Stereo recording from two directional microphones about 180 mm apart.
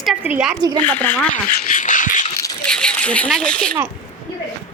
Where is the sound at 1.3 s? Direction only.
45° left (ahead or behind).